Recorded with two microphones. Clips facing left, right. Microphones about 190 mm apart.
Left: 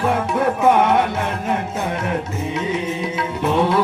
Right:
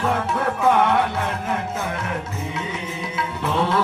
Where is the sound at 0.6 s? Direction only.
20° left (ahead or behind).